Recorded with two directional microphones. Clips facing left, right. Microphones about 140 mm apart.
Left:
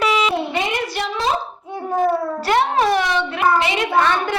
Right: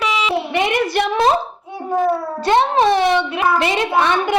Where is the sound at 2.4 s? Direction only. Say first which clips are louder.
Right 4 dB; 25° right (ahead or behind).